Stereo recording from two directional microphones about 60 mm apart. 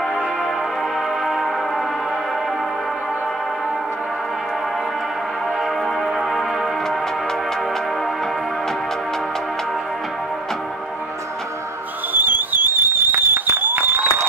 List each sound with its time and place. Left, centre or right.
1.2 s music: centre
6.1 s music: centre
12.1 s a sound: right